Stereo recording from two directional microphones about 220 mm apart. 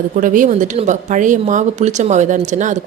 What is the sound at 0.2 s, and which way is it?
Speech, 35° right (ahead or behind).